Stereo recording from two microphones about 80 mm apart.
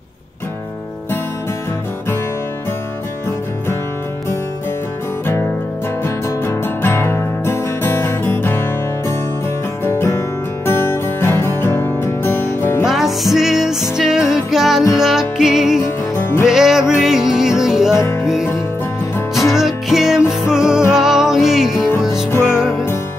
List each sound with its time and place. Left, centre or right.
6.0 s music: left
12.8 s music: centre
15.8 s music: left
16.4 s music: centre
17.9 s music: left
18.2 s music: centre